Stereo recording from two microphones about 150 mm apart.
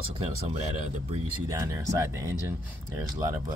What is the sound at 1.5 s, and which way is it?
Speech, 20° right (ahead or behind).